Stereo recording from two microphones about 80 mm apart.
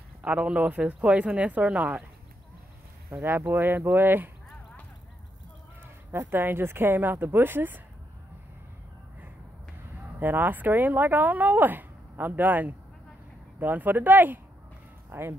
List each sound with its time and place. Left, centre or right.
0.2 s speech: centre
3.1 s speech: right
6.1 s speech: right
10.1 s speech: right